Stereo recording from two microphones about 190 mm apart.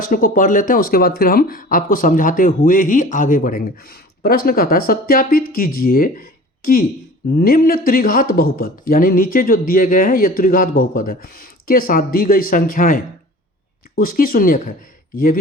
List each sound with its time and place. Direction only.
0.0 s speech: 50° left (ahead or behind)